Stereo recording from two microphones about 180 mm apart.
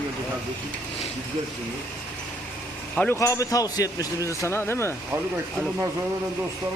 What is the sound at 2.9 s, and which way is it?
Speech, 10° left (ahead or behind).